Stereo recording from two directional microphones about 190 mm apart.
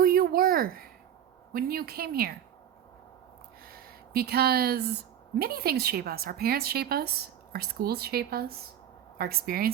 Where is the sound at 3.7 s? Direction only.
55° right (ahead or behind).